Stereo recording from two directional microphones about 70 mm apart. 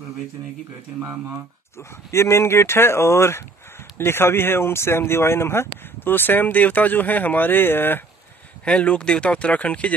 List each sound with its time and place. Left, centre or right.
1.8 s speech: left
8.6 s speech: centre